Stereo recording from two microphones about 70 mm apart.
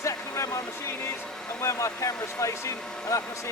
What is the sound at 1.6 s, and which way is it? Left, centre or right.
Speech, left.